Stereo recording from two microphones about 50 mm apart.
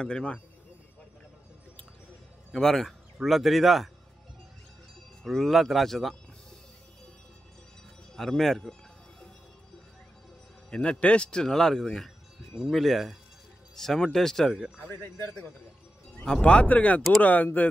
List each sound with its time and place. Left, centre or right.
0.0 s speech: left
2.5 s a man's voice: centre
5.2 s speech: centre
8.2 s a man's voice: centre
10.7 s a man's voice: left
12.7 s a man's voice: centre
14.9 s speech: left
16.3 s speech: centre
16.6 s speech: left